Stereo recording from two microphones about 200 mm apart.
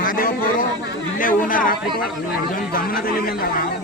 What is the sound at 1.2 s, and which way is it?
Speech, 45° left (ahead or behind).